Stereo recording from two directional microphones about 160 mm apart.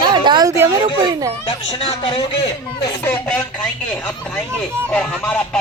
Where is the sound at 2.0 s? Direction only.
35° left (ahead or behind).